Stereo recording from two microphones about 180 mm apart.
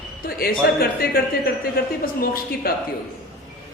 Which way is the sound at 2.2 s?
55° left (ahead or behind).